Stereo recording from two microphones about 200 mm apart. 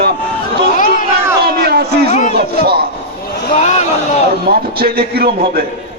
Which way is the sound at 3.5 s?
35° left (ahead or behind).